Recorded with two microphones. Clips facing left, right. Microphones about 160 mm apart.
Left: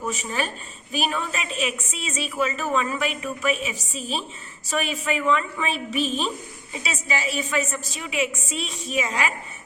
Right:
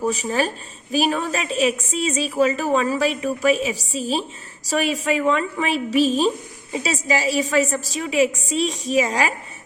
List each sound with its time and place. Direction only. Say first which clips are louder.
0.0 s a woman's voice: right 6 dB; 35° right (ahead or behind)